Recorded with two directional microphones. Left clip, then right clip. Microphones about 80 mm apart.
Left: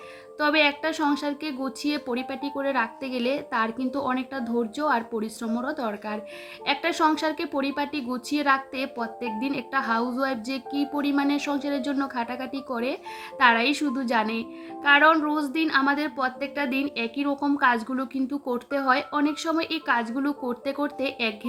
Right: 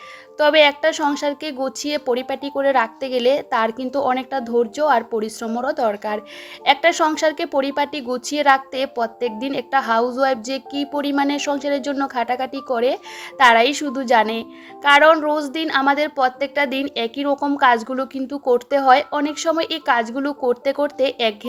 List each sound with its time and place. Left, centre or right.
0.3 s a woman's voice: right
17.3 s a woman's voice: right
17.6 s a woman's voice: right